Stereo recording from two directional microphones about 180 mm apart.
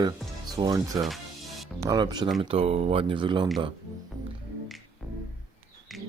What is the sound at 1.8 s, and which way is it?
Speech, 20° right (ahead or behind).